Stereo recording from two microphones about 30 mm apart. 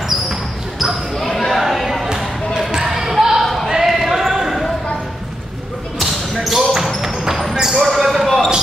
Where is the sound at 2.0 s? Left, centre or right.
Right.